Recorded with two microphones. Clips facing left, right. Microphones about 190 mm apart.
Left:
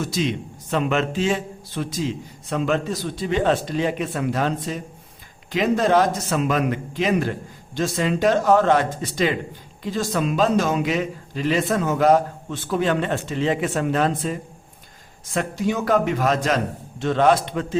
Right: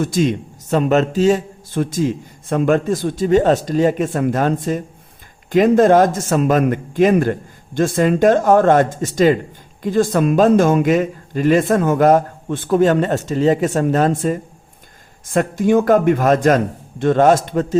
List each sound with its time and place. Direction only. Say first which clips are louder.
0.0 s a man's voice: right 7 dB; 50° right (ahead or behind)